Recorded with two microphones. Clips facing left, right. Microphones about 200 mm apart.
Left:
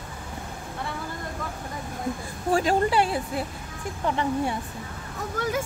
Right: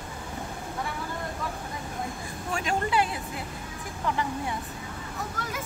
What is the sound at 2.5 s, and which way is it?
A woman's voice, 35° left (ahead or behind).